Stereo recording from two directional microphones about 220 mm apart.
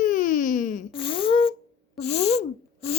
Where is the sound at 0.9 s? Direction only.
25° left (ahead or behind).